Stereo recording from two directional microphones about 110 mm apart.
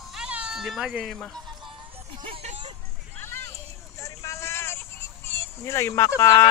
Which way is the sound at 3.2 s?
20° left (ahead or behind).